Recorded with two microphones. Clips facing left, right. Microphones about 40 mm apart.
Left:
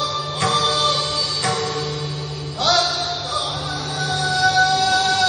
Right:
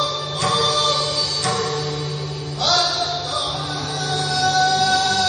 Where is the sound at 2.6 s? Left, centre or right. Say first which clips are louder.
Left 1 dB; left.